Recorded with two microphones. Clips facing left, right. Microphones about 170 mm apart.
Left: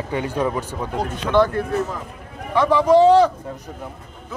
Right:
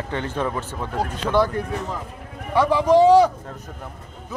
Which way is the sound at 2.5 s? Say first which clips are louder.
Left 2 dB; 10° right (ahead or behind).